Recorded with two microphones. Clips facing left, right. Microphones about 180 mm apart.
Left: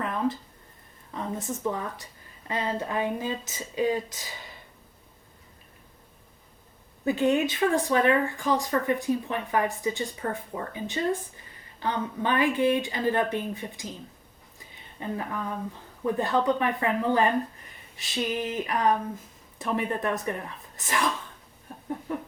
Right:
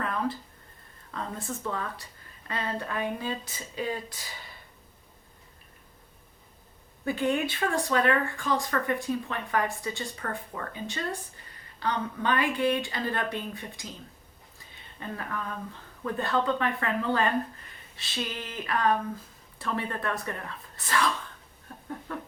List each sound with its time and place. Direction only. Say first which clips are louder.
0.0 s a sound: left 2 dB; 20° left (ahead or behind)
1.1 s a woman's voice: left 3 dB; 15° left (ahead or behind)
7.0 s a woman's voice: left 4 dB; 20° left (ahead or behind)
14.9 s a woman's voice: left 4 dB; 20° left (ahead or behind)
22.1 s a woman's voice: left 5 dB; 15° left (ahead or behind)